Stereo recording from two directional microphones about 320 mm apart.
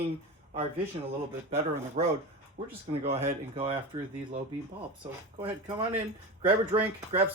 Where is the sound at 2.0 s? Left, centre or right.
Centre.